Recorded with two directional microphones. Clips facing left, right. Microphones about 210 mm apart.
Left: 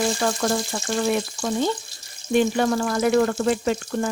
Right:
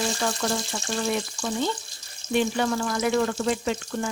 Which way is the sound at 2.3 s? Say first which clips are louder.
Left 4 dB; 45° left (ahead or behind).